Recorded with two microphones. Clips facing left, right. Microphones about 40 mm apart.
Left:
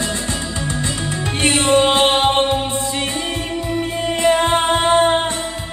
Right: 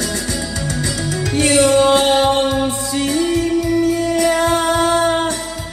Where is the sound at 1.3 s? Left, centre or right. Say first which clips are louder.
Right 2 dB; left.